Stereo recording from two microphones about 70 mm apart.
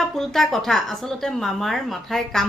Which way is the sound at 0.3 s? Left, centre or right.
Centre.